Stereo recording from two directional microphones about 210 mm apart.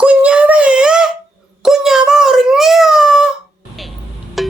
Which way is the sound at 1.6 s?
Centre (ahead or behind).